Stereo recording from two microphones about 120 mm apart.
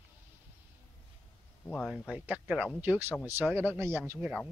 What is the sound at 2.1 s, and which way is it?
A man's voice, 10° right (ahead or behind).